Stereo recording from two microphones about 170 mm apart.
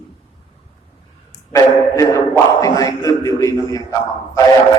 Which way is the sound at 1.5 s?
20° left (ahead or behind).